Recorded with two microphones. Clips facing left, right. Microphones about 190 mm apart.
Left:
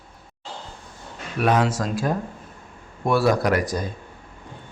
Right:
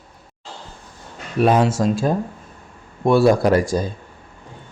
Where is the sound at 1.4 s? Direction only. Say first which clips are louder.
Right 5 dB; 30° right (ahead or behind).